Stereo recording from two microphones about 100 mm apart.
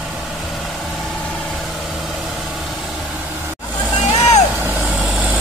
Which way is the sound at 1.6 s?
Centre (ahead or behind).